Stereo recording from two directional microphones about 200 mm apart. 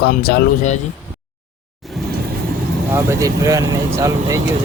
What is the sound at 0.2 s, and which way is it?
Speech, 50° left (ahead or behind).